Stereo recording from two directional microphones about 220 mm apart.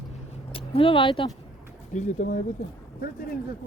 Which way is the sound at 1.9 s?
35° left (ahead or behind).